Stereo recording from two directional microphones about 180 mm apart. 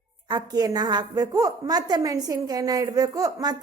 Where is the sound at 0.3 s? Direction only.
25° right (ahead or behind).